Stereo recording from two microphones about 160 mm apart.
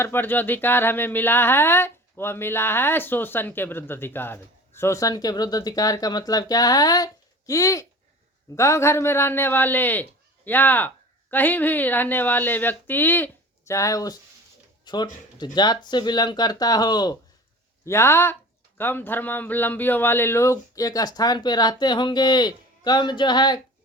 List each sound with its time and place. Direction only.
0.0 s speech: 15° left (ahead or behind)